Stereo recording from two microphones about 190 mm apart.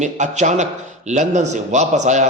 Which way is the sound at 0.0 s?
40° right (ahead or behind).